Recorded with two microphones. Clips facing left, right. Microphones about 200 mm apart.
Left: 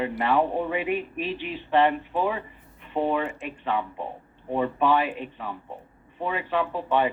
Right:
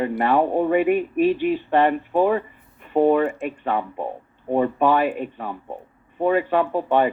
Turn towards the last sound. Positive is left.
turn(degrees=-45)  # may be behind; listen again after turning